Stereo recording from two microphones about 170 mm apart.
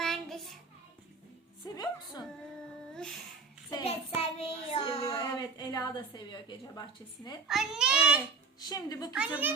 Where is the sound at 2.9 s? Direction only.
5° left (ahead or behind).